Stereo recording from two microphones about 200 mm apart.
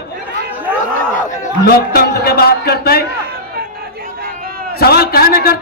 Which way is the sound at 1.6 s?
50° left (ahead or behind).